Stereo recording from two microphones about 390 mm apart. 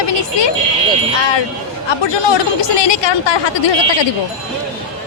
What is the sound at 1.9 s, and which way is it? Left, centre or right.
A woman's voice, left.